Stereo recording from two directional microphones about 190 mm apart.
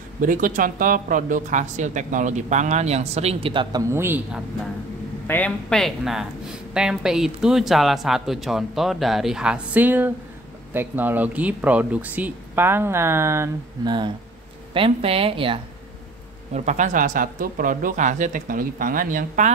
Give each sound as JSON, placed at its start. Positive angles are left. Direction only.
{"t": 0.2, "sound": "speech", "side_deg": -45}
{"t": 3.9, "sound": "speech", "side_deg": -10}
{"t": 5.2, "sound": "speech", "side_deg": 10}
{"t": 16.5, "sound": "speech", "side_deg": -40}